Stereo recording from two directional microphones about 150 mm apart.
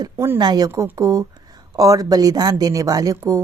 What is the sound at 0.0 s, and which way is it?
A woman's voice, 25° right (ahead or behind).